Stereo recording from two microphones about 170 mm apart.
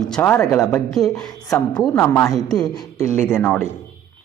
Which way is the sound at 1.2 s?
20° left (ahead or behind).